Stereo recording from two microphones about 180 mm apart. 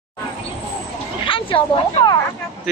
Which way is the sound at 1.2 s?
30° left (ahead or behind).